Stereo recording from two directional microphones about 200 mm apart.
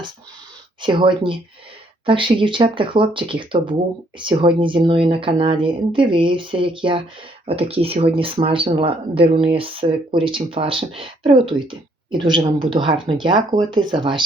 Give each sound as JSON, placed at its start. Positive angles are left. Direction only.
{"t": 0.8, "sound": "speech", "side_deg": -25}